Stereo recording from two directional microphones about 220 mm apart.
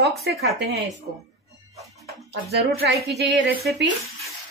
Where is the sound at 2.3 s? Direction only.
50° right (ahead or behind).